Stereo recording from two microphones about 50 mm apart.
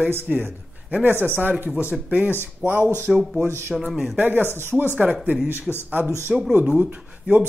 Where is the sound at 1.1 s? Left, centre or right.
Right.